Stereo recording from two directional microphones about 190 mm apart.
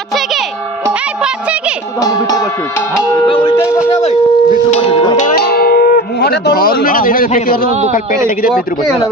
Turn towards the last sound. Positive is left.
turn(degrees=50)  # may be behind; listen again after turning